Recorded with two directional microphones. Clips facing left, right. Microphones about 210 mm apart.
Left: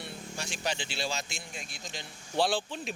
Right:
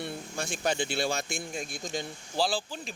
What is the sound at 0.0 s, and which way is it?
Speech, 50° right (ahead or behind).